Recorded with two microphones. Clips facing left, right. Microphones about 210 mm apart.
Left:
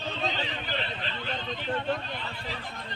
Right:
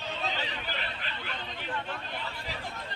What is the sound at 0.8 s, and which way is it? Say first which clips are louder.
Vehicle: left 4 dB; 25° left (ahead or behind).